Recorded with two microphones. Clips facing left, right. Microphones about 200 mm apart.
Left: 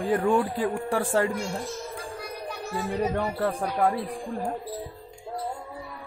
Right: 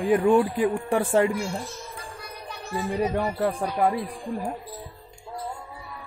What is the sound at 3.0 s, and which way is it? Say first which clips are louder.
Speech: right 2 dB; 10° right (ahead or behind).